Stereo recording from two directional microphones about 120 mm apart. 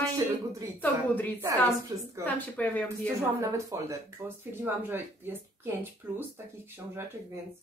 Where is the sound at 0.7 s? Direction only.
15° left (ahead or behind).